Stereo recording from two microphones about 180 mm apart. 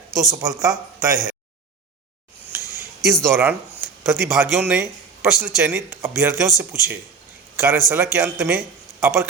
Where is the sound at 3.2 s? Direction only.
10° right (ahead or behind).